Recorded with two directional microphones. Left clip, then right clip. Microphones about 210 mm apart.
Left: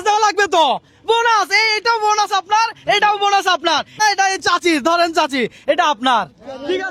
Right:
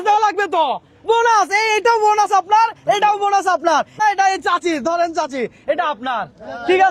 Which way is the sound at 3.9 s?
20° left (ahead or behind).